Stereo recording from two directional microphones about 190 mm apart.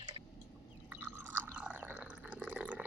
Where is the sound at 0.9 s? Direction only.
10° right (ahead or behind).